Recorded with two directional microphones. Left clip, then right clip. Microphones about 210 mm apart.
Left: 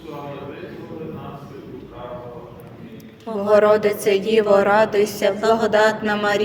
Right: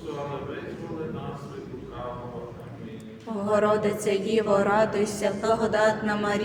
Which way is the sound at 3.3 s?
30° left (ahead or behind).